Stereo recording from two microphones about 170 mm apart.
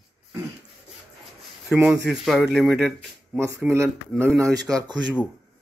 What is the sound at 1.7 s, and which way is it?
A man's voice, 5° right (ahead or behind).